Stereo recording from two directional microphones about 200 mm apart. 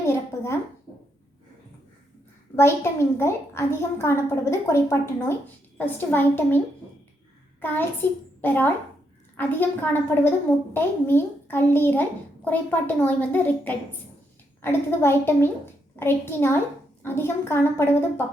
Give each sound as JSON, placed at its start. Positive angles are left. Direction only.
{"t": 0.0, "sound": "a sound", "side_deg": 15}
{"t": 2.6, "sound": "a woman's voice", "side_deg": 10}
{"t": 7.6, "sound": "a child's voice", "side_deg": 10}